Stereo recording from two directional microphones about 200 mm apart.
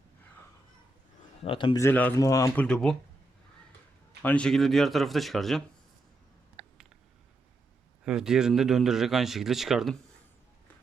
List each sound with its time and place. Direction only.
1.4 s a man's voice: 25° left (ahead or behind)
1.8 s speech: 10° left (ahead or behind)
2.6 s speech: 5° left (ahead or behind)
4.2 s speech: 5° left (ahead or behind)
8.0 s speech: 5° right (ahead or behind)